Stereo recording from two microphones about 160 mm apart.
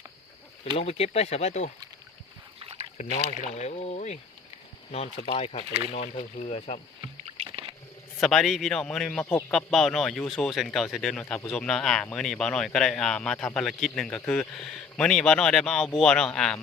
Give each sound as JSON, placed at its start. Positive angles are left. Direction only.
{"t": 0.6, "sound": "speech", "side_deg": 40}
{"t": 2.6, "sound": "rowboat", "side_deg": -35}
{"t": 3.0, "sound": "speech", "side_deg": 55}
{"t": 7.3, "sound": "rowboat", "side_deg": -35}
{"t": 8.2, "sound": "speech", "side_deg": 0}
{"t": 11.2, "sound": "speech", "side_deg": 15}
{"t": 11.5, "sound": "speech", "side_deg": 5}